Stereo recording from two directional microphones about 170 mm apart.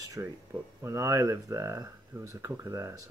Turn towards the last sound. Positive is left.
turn(degrees=-20)  # may be behind; listen again after turning